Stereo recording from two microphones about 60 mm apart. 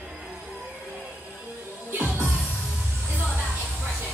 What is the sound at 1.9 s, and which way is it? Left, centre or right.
Music, right.